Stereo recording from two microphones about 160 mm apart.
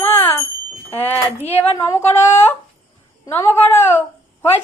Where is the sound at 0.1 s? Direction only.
15° left (ahead or behind).